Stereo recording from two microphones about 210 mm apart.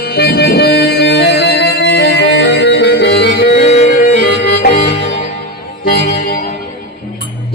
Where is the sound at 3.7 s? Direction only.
30° left (ahead or behind).